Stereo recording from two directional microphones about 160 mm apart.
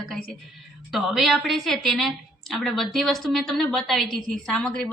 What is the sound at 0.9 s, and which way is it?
A woman's voice, centre (ahead or behind).